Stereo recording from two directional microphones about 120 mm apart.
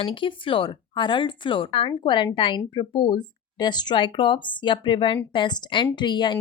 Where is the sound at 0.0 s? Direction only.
45° left (ahead or behind).